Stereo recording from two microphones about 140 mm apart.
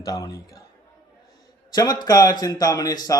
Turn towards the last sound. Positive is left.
turn(degrees=30)  # may be behind; listen again after turning